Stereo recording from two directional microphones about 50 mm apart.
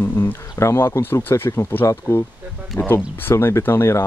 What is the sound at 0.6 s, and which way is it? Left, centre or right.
Speech, left.